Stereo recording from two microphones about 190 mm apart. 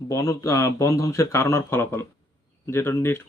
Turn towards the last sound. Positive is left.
turn(degrees=15)  # may be behind; listen again after turning